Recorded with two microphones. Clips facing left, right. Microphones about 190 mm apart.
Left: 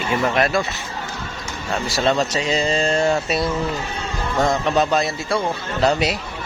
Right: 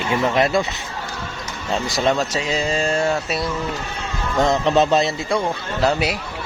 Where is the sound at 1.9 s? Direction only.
15° right (ahead or behind).